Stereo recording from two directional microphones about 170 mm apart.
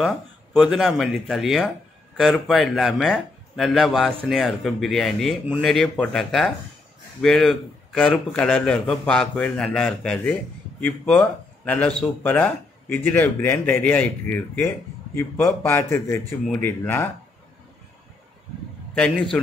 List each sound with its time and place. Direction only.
0.0 s speech: 5° right (ahead or behind); by 17.1 s 15° left (ahead or behind)
18.9 s speech: 5° left (ahead or behind)